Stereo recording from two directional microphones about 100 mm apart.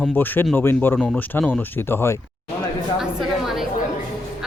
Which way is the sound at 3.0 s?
5° right (ahead or behind).